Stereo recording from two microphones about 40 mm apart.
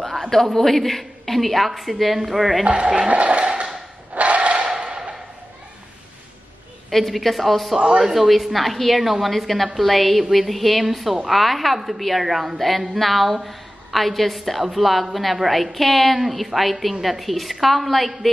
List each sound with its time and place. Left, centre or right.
0.0 s a woman's voice: centre
2.6 s speech: right
4.1 s a sound: right
4.6 s a sound: centre
6.9 s a woman's voice: centre
7.7 s speech: centre
8.0 s a woman's voice: centre